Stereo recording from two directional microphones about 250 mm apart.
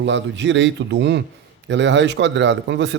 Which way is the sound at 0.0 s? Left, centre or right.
Right.